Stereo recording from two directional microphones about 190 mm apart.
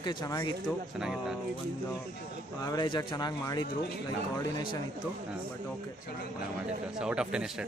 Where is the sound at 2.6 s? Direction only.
20° left (ahead or behind).